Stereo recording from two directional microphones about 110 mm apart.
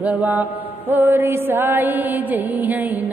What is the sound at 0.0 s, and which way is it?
Mantra, 15° right (ahead or behind).